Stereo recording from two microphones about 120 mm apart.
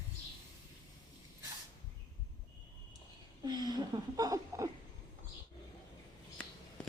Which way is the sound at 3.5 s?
35° right (ahead or behind).